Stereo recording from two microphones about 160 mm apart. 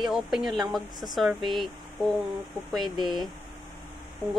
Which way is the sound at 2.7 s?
Centre (ahead or behind).